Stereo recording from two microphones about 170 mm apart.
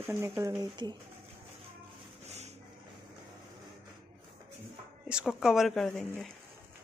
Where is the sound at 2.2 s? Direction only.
40° right (ahead or behind).